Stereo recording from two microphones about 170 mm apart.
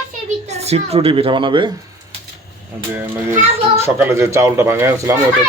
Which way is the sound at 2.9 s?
15° right (ahead or behind).